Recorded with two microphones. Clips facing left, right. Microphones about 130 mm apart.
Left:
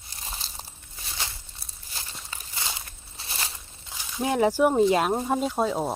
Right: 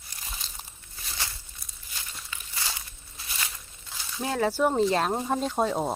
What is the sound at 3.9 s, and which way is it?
Speech, 15° left (ahead or behind).